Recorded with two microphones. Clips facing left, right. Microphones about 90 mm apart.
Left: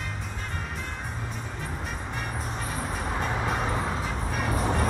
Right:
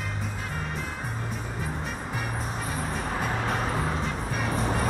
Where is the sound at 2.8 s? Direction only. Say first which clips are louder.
Even; centre (ahead or behind).